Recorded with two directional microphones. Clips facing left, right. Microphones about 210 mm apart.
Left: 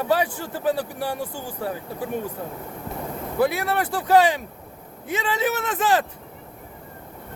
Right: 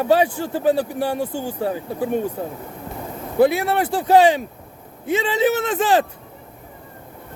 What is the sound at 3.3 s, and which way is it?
A man's voice, 25° right (ahead or behind).